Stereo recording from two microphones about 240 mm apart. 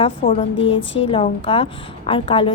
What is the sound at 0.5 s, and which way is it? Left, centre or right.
Speech, left.